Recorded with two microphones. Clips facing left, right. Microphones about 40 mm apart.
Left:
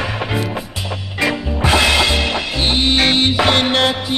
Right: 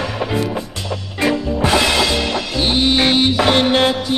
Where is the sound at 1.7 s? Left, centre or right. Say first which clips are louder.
Left 2 dB; centre.